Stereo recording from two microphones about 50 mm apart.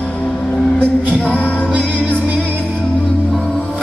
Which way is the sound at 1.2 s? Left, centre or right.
Left.